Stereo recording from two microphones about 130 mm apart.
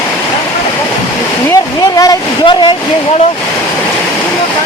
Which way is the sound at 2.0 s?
30° left (ahead or behind).